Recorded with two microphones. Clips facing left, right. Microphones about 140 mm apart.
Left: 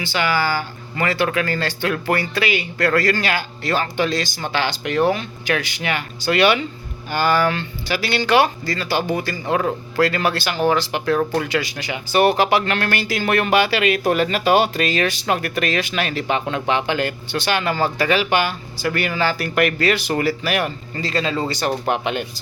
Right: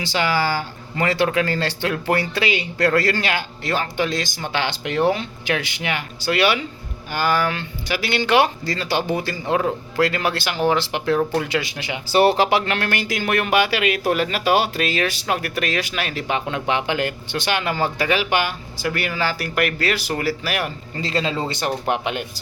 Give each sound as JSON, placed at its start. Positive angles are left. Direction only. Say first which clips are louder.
{"t": 0.0, "sound": "speech", "louder": "even", "side_deg": -30}
{"t": 12.0, "sound": "speech", "louder": "even", "side_deg": -30}
{"t": 21.0, "sound": "speech", "louder": "left 1 dB", "side_deg": -25}
{"t": 21.8, "sound": "speech", "louder": "left 1 dB", "side_deg": -10}